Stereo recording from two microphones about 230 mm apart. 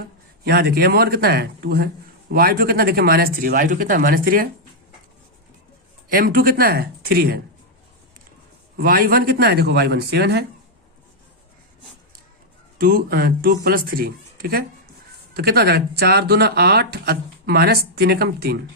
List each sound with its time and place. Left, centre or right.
0.4 s speech: right
6.1 s speech: right
8.8 s speech: right
12.8 s speech: right